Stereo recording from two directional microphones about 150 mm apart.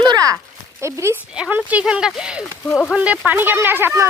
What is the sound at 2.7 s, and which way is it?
Speech, 10° left (ahead or behind).